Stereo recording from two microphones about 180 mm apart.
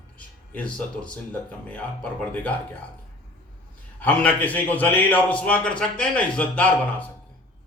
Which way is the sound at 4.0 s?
10° left (ahead or behind).